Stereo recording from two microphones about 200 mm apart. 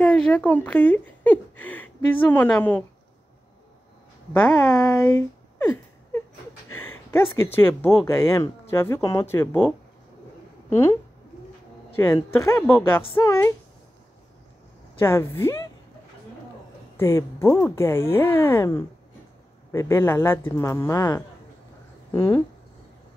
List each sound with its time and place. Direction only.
0.0 s speech: 5° left (ahead or behind)
4.3 s speech: 10° left (ahead or behind)
15.0 s speech: 10° left (ahead or behind)
16.9 s speech: 15° left (ahead or behind)